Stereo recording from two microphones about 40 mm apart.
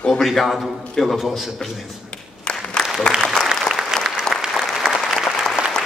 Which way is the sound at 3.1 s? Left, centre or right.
Centre.